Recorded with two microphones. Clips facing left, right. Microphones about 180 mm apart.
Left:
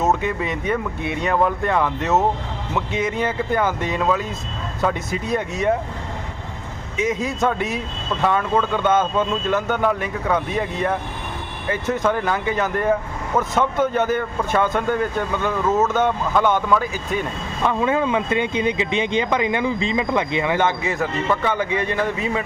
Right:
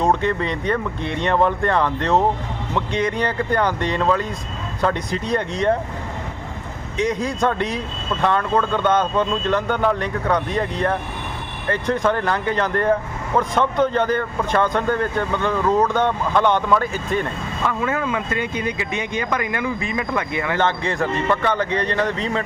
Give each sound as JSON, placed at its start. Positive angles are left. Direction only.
{"t": 0.0, "sound": "speech", "side_deg": 5}
{"t": 6.9, "sound": "speech", "side_deg": 5}
{"t": 17.7, "sound": "speech", "side_deg": 20}